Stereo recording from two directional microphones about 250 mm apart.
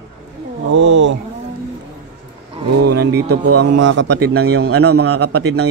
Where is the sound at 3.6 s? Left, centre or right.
Right.